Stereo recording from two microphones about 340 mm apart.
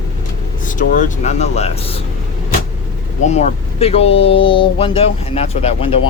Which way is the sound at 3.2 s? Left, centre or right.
Centre.